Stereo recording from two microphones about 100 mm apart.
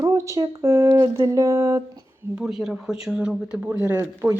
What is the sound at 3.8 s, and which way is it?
Speech, 20° right (ahead or behind).